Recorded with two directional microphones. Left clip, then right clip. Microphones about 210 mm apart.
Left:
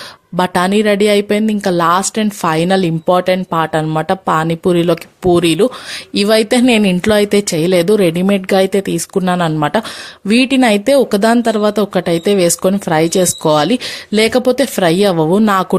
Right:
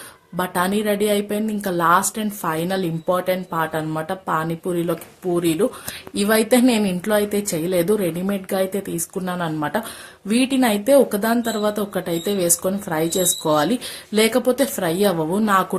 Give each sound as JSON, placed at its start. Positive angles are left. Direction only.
{"t": 0.3, "sound": "a woman's voice", "side_deg": 45}